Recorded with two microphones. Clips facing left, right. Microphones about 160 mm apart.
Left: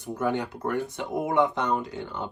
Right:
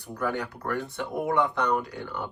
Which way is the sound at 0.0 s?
20° left (ahead or behind).